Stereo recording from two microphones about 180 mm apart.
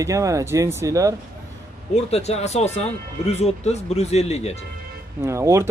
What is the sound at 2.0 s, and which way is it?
Speech, 35° left (ahead or behind).